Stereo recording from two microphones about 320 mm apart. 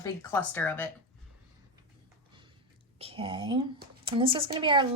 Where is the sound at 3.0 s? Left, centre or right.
Centre.